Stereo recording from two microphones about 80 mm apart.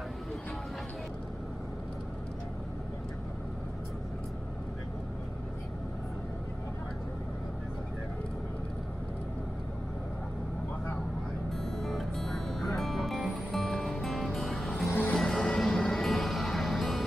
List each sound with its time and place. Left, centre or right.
11.5 s music: centre
14.9 s vehicle: left
15.1 s music: centre